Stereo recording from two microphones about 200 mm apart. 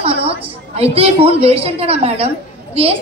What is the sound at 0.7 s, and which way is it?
A woman's voice, 30° right (ahead or behind).